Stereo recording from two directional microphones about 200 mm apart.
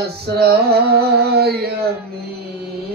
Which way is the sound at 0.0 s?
55° right (ahead or behind).